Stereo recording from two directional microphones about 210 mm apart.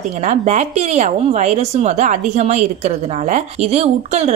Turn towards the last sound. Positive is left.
turn(degrees=-30)  # may be behind; listen again after turning